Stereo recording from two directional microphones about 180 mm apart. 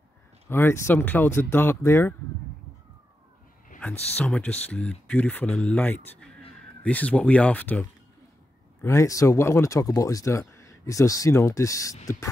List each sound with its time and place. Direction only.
0.5 s speech: 15° left (ahead or behind)
4.2 s speech: 5° left (ahead or behind)
8.8 s speech: 15° left (ahead or behind)